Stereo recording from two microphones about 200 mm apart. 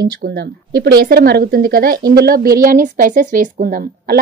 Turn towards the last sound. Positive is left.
turn(degrees=-45)  # may be behind; listen again after turning